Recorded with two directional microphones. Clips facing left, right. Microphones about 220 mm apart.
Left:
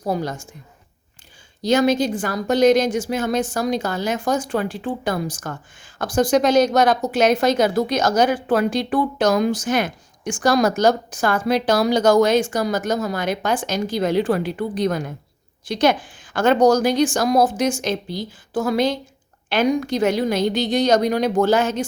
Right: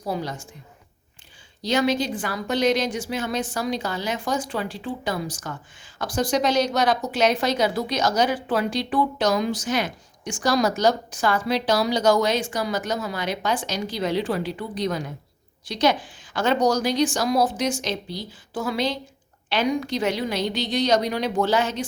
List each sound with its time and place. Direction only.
0.0 s a woman's voice: 45° left (ahead or behind)
1.6 s a woman's voice: 45° left (ahead or behind)